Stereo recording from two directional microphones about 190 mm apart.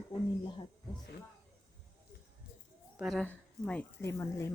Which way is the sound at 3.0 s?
Centre (ahead or behind).